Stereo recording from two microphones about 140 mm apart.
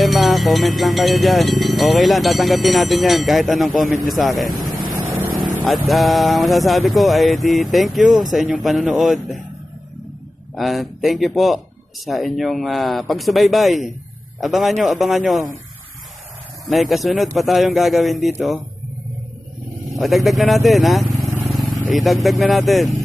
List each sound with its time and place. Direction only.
0.0 s speech: centre (ahead or behind)
10.5 s speech: centre (ahead or behind)
16.6 s speech: centre (ahead or behind)
20.0 s speech: centre (ahead or behind)
21.5 s vehicle: centre (ahead or behind)
21.9 s speech: centre (ahead or behind)